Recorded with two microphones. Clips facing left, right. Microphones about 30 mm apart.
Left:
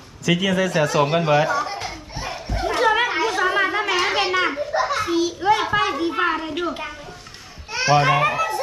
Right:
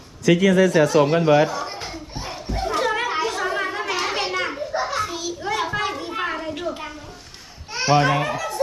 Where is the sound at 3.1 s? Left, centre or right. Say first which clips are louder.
Left 2 dB; centre.